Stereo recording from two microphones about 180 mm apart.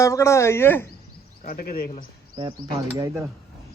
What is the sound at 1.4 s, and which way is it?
Speech, 55° left (ahead or behind).